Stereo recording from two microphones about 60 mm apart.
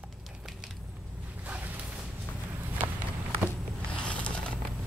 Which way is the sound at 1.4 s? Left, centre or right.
Right.